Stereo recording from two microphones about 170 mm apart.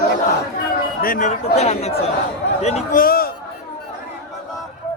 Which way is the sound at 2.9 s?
60° left (ahead or behind).